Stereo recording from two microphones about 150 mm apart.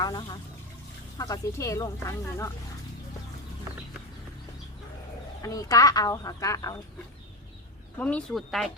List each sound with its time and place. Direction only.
0.0 s speech: 30° left (ahead or behind)
5.4 s speech: 25° left (ahead or behind)
7.9 s speech: 10° left (ahead or behind)